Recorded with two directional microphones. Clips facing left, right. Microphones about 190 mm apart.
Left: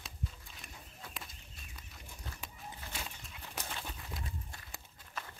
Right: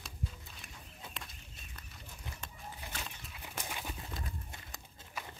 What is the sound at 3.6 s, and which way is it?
Horse, 10° right (ahead or behind).